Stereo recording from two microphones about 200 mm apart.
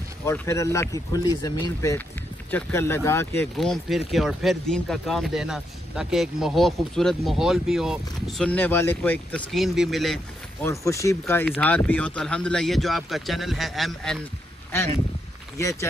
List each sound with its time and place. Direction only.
0.2 s speech: 15° left (ahead or behind)
3.5 s speech: centre (ahead or behind)
10.6 s speech: 15° left (ahead or behind)
15.5 s speech: 15° left (ahead or behind)